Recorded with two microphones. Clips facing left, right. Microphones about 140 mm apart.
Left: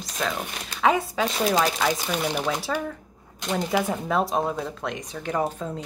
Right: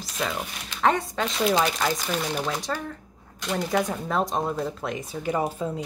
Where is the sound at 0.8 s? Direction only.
5° left (ahead or behind).